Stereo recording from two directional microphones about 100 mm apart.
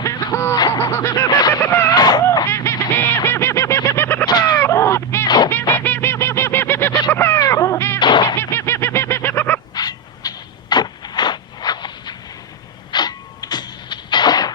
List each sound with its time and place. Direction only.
0.0 s snicker: 30° left (ahead or behind)
0.8 s a sound: 30° left (ahead or behind)
1.6 s a sound: 20° left (ahead or behind)
1.9 s a sound: 40° left (ahead or behind)
2.5 s goose: 25° left (ahead or behind)
4.3 s fowl: 45° left (ahead or behind)
4.5 s honk: 25° left (ahead or behind)
5.5 s goose: 20° left (ahead or behind)
7.1 s music: 25° left (ahead or behind)
7.9 s music: 50° left (ahead or behind)
8.4 s goose: 25° left (ahead or behind)
9.7 s a sound: 40° left (ahead or behind)